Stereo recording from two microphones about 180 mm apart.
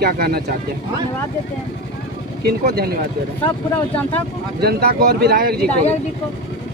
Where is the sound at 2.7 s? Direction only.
60° right (ahead or behind).